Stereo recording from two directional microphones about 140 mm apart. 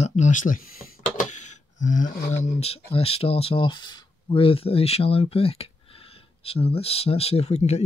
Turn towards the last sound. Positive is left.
turn(degrees=50)  # may be behind; listen again after turning